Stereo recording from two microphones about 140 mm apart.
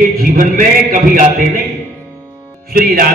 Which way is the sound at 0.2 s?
80° right.